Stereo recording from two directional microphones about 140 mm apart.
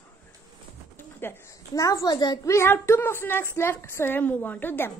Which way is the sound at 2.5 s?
20° left (ahead or behind).